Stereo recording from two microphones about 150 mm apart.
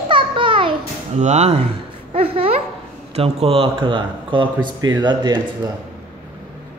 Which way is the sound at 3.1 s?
40° right (ahead or behind).